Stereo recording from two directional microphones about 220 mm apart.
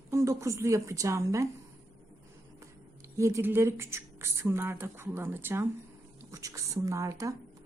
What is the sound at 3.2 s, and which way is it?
A woman's voice, 10° right (ahead or behind).